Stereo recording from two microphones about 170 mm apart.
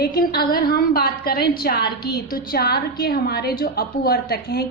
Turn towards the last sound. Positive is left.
turn(degrees=65)  # may be behind; listen again after turning